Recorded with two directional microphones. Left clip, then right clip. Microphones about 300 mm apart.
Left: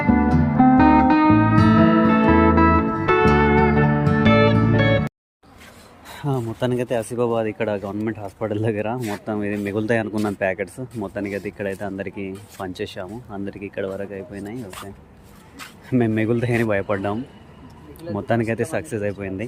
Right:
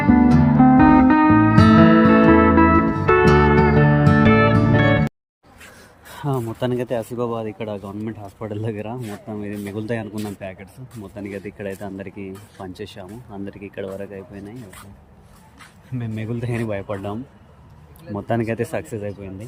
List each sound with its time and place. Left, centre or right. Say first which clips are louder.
0.0 s music: right 3 dB; centre
6.2 s speech: even; centre
9.0 s speech: left 5 dB; left
9.2 s speech: left 6 dB; centre
15.9 s speech: left 11 dB; centre